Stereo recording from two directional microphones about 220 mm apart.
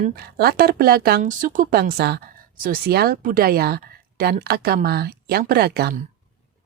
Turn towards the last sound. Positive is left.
turn(degrees=-45)  # may be behind; listen again after turning